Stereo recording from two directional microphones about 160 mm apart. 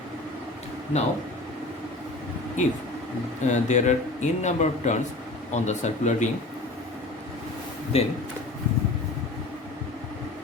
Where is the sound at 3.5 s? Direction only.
50° left (ahead or behind).